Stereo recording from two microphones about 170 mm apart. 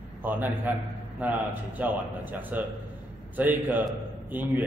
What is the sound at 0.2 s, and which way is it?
A man's voice, 10° right (ahead or behind).